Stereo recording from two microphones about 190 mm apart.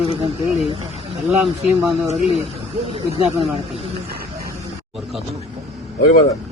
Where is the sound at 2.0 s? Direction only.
35° right (ahead or behind).